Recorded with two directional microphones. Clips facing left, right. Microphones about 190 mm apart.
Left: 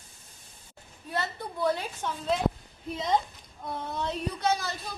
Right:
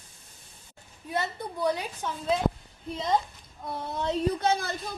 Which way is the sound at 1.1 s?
20° right (ahead or behind).